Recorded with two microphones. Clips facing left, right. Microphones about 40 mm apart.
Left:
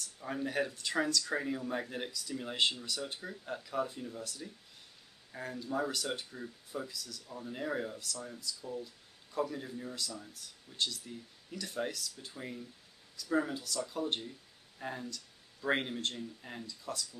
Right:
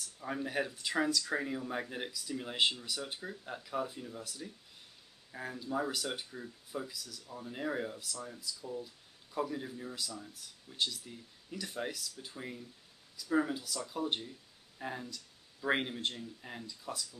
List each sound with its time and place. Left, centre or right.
0.2 s speech: centre